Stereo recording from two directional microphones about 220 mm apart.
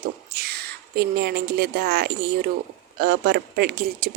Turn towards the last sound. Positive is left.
turn(degrees=-45)  # may be behind; listen again after turning